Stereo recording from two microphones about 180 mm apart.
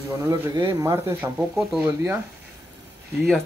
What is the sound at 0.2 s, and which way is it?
Speech, 15° right (ahead or behind).